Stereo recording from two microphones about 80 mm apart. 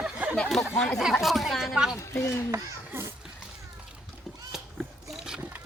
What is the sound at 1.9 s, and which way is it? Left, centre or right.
Speech, left.